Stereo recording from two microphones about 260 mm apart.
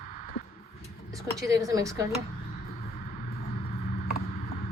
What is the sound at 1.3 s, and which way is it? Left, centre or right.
Speech, centre.